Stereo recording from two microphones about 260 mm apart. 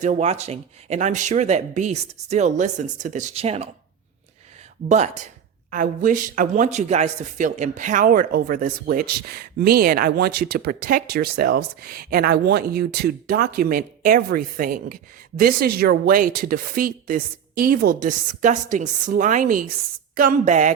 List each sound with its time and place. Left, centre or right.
0.0 s speech: right
4.9 s speech: right